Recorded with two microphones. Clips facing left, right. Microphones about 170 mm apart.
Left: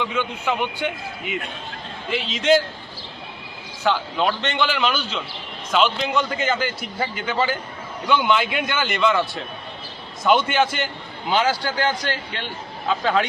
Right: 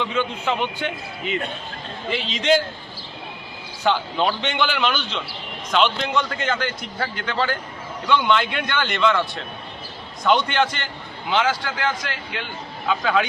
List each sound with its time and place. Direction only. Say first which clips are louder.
0.0 s a man's voice: right 1 dB; 10° left (ahead or behind)
3.8 s a man's voice: even; centre (ahead or behind)
11.6 s speech: left 3 dB; 30° left (ahead or behind)